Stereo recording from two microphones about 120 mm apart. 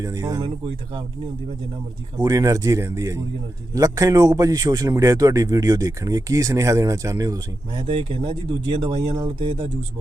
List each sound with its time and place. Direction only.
0.0 s speech: 30° right (ahead or behind)
2.1 s a man's voice: 30° right (ahead or behind)
7.9 s speech: 45° right (ahead or behind)